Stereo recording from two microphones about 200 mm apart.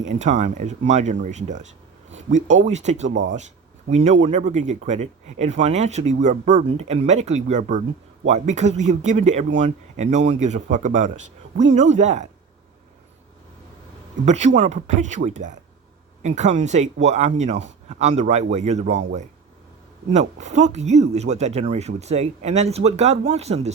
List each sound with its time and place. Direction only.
0.0 s speech: 35° right (ahead or behind)
14.3 s speech: 35° right (ahead or behind)